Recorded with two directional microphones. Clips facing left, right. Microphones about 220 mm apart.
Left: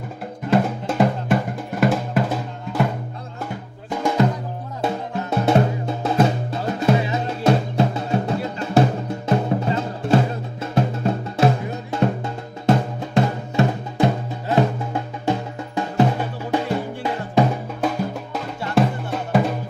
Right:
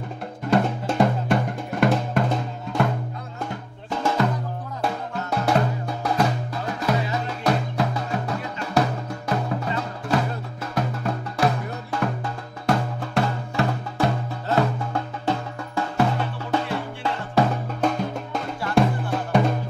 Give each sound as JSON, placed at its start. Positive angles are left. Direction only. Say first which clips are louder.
{"t": 0.5, "sound": "drum", "louder": "left 2 dB", "side_deg": 5}
{"t": 3.9, "sound": "drum", "louder": "left 3 dB", "side_deg": 15}
{"t": 4.8, "sound": "music", "louder": "left 4 dB", "side_deg": 25}
{"t": 17.8, "sound": "music", "louder": "left 1 dB", "side_deg": 5}